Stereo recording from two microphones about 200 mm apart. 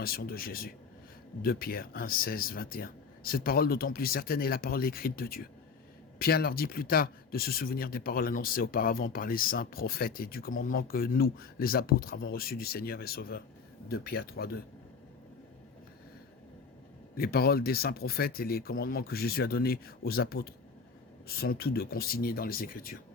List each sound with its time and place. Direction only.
0.0 s speech: 50° left (ahead or behind)
17.2 s speech: 50° left (ahead or behind)